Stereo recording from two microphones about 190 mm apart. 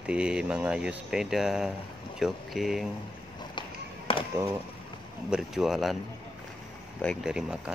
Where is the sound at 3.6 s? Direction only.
25° left (ahead or behind).